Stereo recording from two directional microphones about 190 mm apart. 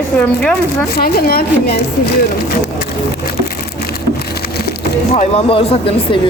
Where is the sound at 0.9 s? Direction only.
50° left (ahead or behind).